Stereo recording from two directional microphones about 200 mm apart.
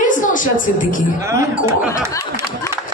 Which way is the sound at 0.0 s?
40° left (ahead or behind).